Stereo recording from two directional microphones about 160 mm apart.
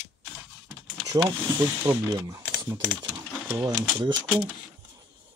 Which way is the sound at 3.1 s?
15° right (ahead or behind).